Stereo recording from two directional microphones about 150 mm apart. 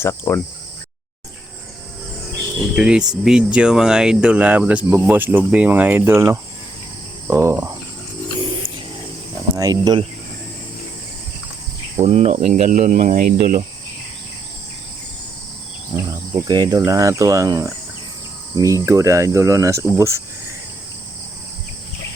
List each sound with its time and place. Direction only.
0.0 s cricket: 15° left (ahead or behind)
2.7 s speech: 5° right (ahead or behind)
9.6 s speech: 25° right (ahead or behind)
11.9 s cricket: 45° right (ahead or behind)
12.5 s speech: 55° right (ahead or behind)
15.9 s cricket: 40° right (ahead or behind)
16.5 s speech: 25° right (ahead or behind)